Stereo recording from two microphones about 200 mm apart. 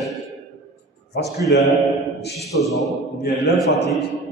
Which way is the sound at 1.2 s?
55° left (ahead or behind).